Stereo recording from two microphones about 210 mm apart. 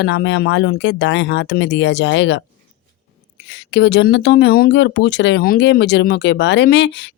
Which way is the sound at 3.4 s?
60° left (ahead or behind).